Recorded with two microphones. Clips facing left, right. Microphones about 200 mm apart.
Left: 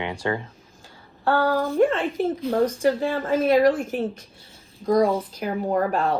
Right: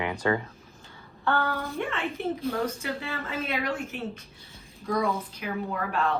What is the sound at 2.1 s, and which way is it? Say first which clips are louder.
Speech: left 7 dB; 90° left.